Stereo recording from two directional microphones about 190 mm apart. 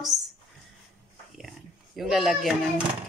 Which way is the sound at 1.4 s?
Centre (ahead or behind).